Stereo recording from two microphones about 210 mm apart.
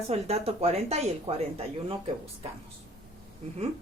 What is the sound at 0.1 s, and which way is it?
Speech, 30° right (ahead or behind).